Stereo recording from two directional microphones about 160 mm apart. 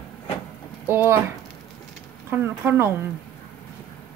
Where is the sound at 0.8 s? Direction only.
15° right (ahead or behind).